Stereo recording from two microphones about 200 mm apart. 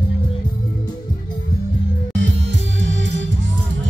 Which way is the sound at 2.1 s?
65° right (ahead or behind).